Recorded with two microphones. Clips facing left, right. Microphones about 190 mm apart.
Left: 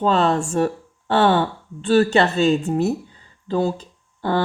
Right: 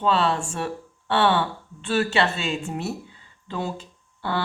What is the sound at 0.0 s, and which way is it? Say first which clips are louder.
A woman's voice: left 4 dB; 45° left (ahead or behind).